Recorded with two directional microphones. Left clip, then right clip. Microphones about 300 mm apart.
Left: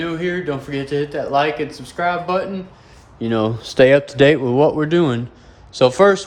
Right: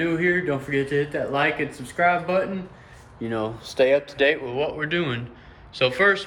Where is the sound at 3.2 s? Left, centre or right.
Left.